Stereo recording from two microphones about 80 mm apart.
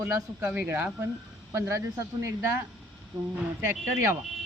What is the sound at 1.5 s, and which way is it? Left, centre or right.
Speech, right.